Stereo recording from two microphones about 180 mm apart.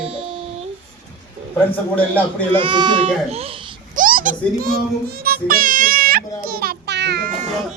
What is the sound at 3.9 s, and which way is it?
Music, 50° right (ahead or behind).